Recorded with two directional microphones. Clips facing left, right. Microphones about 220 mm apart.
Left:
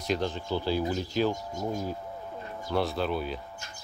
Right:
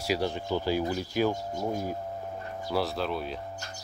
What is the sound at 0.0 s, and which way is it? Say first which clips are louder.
Speech: right 1 dB; 10° right (ahead or behind).